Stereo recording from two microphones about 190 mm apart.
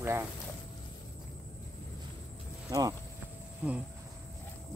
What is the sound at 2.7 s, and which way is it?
Speech, 20° right (ahead or behind).